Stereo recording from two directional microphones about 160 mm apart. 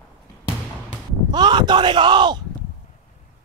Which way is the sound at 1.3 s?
25° right (ahead or behind).